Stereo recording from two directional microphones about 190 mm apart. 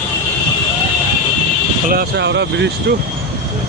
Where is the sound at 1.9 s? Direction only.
55° right (ahead or behind).